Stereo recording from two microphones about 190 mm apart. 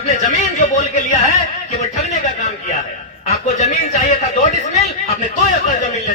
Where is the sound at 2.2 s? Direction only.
40° left (ahead or behind).